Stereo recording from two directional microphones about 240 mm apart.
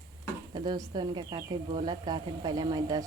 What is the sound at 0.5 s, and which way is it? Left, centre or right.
Speech, centre.